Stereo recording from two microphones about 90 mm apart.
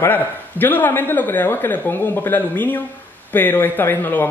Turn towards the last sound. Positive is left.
turn(degrees=25)  # may be behind; listen again after turning